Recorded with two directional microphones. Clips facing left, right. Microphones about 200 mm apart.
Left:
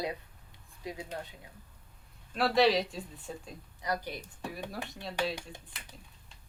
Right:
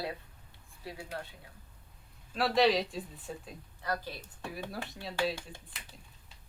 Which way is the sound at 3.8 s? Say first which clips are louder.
Left 2 dB; 15° left (ahead or behind).